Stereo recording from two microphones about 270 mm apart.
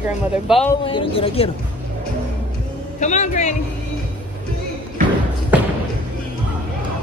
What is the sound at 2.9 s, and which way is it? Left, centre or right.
Speech, left.